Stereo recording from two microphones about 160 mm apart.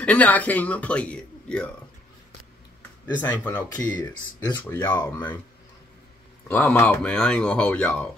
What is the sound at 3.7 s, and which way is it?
Speech, 20° left (ahead or behind).